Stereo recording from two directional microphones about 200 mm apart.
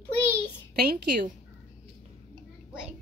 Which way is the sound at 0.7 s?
40° right (ahead or behind).